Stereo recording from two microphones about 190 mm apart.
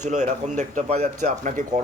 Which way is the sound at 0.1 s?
40° right (ahead or behind).